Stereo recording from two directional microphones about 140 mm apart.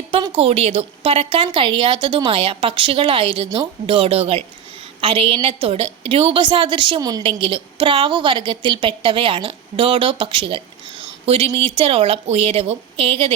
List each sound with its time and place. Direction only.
0.1 s a woman's voice: 45° right (ahead or behind)